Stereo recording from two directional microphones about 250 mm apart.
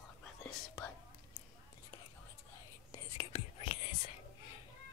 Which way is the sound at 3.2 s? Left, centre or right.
Left.